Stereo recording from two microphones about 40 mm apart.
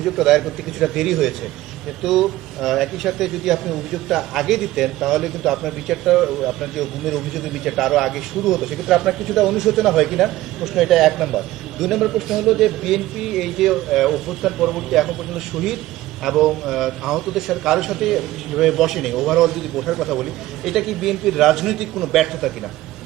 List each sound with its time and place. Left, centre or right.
0.0 s a man's voice: centre